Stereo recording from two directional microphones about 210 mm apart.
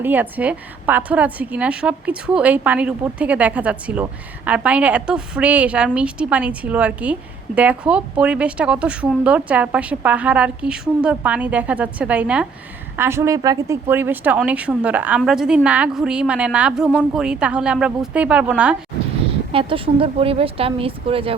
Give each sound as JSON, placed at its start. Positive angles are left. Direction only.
{"t": 0.0, "sound": "a woman's voice", "side_deg": -10}
{"t": 19.5, "sound": "speech", "side_deg": -25}